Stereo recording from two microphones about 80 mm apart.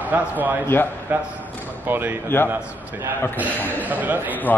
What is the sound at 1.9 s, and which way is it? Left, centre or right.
Speech, right.